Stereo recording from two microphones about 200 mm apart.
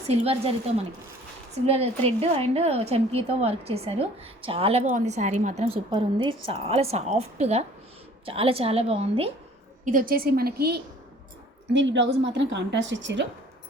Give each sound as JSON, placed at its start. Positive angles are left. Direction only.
{"t": 0.1, "sound": "a woman's voice", "side_deg": -30}
{"t": 1.5, "sound": "a woman's voice", "side_deg": -30}
{"t": 5.9, "sound": "a woman's voice", "side_deg": -25}
{"t": 9.8, "sound": "a woman's voice", "side_deg": -45}
{"t": 11.7, "sound": "a woman's voice", "side_deg": -65}